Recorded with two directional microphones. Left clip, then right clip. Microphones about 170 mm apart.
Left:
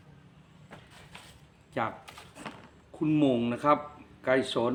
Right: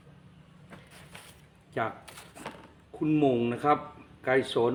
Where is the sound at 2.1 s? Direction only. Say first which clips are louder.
Right 1 dB; 25° right (ahead or behind).